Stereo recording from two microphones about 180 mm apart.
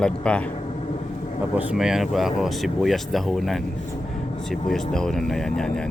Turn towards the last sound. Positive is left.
turn(degrees=5)  # may be behind; listen again after turning